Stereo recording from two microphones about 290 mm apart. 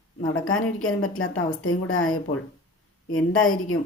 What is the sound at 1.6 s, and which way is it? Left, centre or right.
Speech, left.